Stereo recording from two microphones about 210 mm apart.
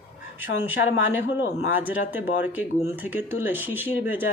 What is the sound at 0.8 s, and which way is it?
Speech, 50° left (ahead or behind).